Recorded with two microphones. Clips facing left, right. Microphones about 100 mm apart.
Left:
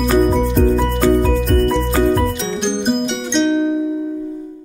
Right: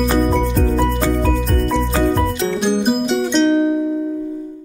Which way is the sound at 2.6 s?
5° right (ahead or behind).